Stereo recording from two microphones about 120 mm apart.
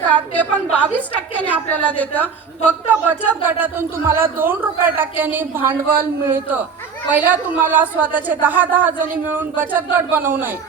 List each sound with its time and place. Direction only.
0.1 s a man's voice: 10° left (ahead or behind)
3.1 s a man's voice: 15° right (ahead or behind)